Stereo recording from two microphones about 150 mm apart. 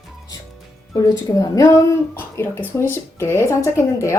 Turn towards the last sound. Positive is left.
turn(degrees=20)  # may be behind; listen again after turning